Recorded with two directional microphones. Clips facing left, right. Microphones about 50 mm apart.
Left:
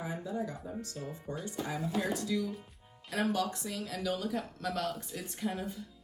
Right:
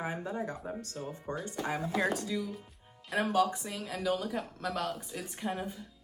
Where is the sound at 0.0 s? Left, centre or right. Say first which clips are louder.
Right 1 dB; right.